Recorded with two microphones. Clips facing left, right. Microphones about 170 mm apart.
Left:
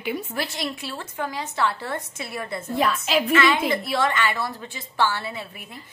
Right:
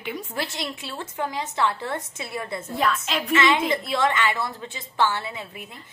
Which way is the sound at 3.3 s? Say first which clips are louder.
Right 2 dB; 20° right (ahead or behind).